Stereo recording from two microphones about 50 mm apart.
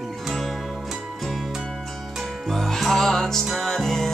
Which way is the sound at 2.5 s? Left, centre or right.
Centre.